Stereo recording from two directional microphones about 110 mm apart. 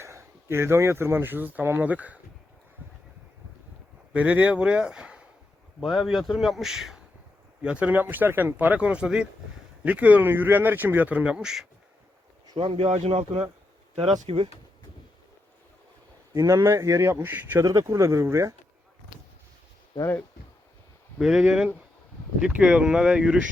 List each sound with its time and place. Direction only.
0.0 s speech: 25° right (ahead or behind)
4.1 s speech: 10° right (ahead or behind)
12.5 s speech: 55° right (ahead or behind)
16.3 s speech: 30° right (ahead or behind)
21.2 s speech: 5° right (ahead or behind)